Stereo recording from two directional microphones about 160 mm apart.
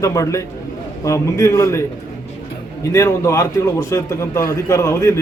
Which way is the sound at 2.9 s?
20° left (ahead or behind).